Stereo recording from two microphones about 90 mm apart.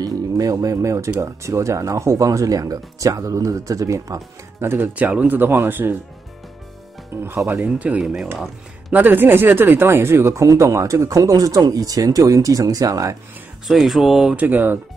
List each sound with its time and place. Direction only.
0.0 s speech: 40° right (ahead or behind); by 5.9 s 25° right (ahead or behind)
7.2 s speech: 30° right (ahead or behind)
7.6 s speech: 15° right (ahead or behind); by 13.1 s 40° right (ahead or behind)
13.7 s speech: centre (ahead or behind)
14.3 s speech: 20° right (ahead or behind)